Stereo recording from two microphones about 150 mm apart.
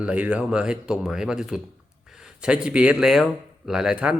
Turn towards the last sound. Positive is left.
turn(degrees=-5)  # may be behind; listen again after turning